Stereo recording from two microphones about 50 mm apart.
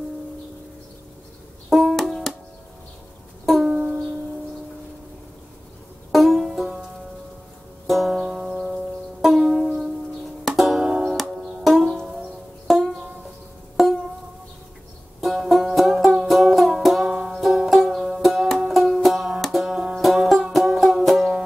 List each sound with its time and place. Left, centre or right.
1.7 s music: centre
3.4 s music: centre
6.1 s banjo: centre
7.8 s music: centre
10.9 s music: centre
11.1 s music: centre
15.1 s banjo: centre
17.1 s music: centre
19.4 s banjo: centre
20.0 s music: centre
20.5 s banjo: centre